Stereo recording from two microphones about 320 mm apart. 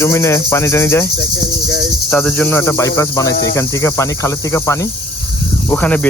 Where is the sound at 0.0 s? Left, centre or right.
Centre.